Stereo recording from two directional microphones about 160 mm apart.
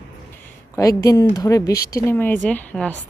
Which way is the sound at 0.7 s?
20° left (ahead or behind).